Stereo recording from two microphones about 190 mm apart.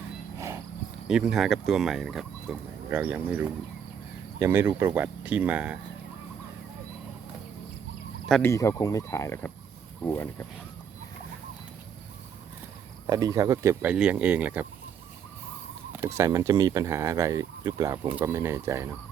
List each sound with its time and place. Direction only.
0.3 s a sound: 15° right (ahead or behind)
1.0 s speech: centre (ahead or behind)
8.3 s speech: 10° left (ahead or behind)
13.1 s speech: 20° right (ahead or behind)
15.9 s speech: 15° right (ahead or behind)